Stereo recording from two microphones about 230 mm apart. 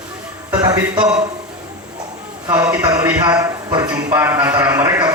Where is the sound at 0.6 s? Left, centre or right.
Centre.